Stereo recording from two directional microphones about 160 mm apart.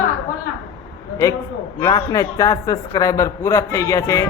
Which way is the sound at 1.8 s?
25° left (ahead or behind).